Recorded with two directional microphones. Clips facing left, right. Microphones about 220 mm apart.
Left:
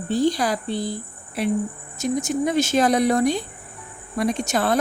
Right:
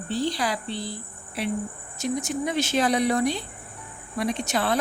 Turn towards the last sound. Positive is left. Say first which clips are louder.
# left 4 dB
turn(degrees=45)  # may be behind; listen again after turning